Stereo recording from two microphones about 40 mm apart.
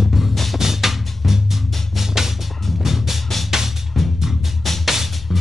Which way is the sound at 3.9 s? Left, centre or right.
Centre.